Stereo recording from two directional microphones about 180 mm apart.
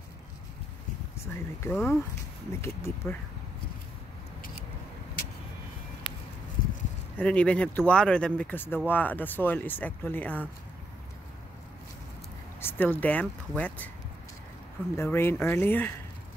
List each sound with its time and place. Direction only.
1.2 s speech: 10° left (ahead or behind)
6.0 s a sound: 25° left (ahead or behind)
7.2 s speech: 5° left (ahead or behind)
12.5 s speech: 10° left (ahead or behind)